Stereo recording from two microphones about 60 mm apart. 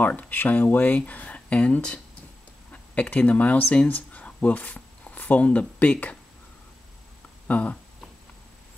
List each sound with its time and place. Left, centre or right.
0.0 s speech: left
7.4 s speech: left